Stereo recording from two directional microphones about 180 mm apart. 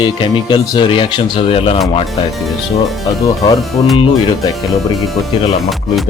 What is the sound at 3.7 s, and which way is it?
Speech, centre (ahead or behind).